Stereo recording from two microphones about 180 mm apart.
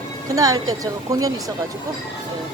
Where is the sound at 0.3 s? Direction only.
20° right (ahead or behind).